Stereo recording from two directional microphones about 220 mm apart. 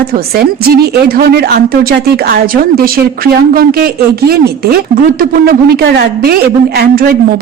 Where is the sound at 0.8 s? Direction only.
45° right (ahead or behind).